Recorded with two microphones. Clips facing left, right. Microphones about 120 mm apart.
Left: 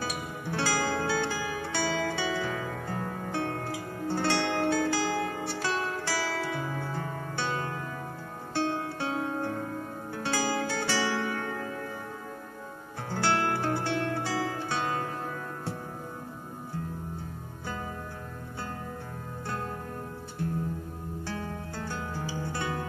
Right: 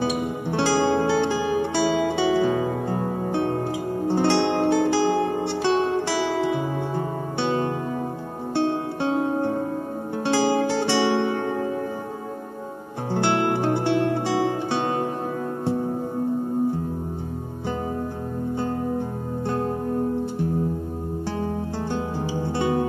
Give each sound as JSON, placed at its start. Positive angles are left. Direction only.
{"t": 0.0, "sound": "music", "side_deg": -25}
{"t": 13.1, "sound": "music", "side_deg": -20}
{"t": 19.4, "sound": "music", "side_deg": -25}
{"t": 21.9, "sound": "music", "side_deg": -25}